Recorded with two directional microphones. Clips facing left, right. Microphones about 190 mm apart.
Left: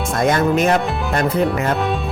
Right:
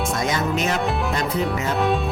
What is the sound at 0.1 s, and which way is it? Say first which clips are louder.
Speech: left 6 dB; 55° left (ahead or behind).